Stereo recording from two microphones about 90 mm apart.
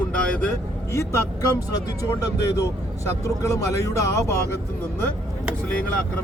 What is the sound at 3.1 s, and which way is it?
Speech, 35° left (ahead or behind).